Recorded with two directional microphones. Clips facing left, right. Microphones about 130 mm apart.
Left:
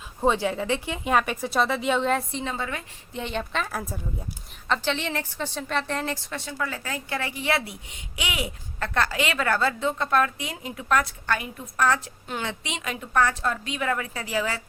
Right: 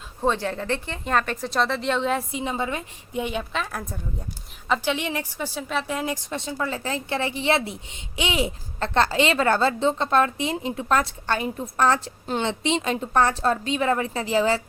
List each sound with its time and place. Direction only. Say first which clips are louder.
0.2 s speech: left 1 dB; 10° left (ahead or behind)
2.4 s a woman's voice: right 4 dB; 20° right (ahead or behind); by 3.9 s centre (ahead or behind)
4.7 s a woman's voice: right 2 dB; 10° right (ahead or behind); by 14.6 s 30° right (ahead or behind)